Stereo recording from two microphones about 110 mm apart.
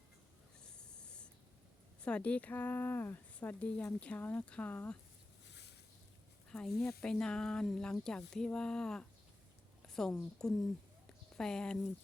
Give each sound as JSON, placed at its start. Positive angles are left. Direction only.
{"t": 0.6, "sound": "snort", "side_deg": 5}
{"t": 2.0, "sound": "a woman's voice", "side_deg": 10}
{"t": 6.5, "sound": "a woman's voice", "side_deg": 5}